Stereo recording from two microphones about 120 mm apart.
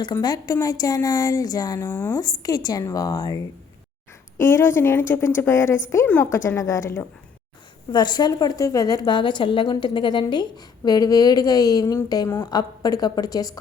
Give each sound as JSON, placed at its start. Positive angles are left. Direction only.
{"t": 0.0, "sound": "a woman's voice", "side_deg": 35}
{"t": 7.9, "sound": "a woman's voice", "side_deg": 35}